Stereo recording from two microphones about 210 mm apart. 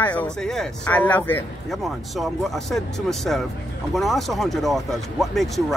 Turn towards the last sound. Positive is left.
turn(degrees=0)  # may be behind; listen again after turning